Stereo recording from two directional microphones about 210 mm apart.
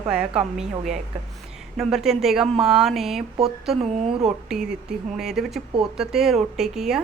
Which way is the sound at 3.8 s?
30° right (ahead or behind).